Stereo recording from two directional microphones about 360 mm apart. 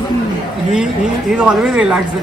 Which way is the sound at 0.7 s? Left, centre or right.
Centre.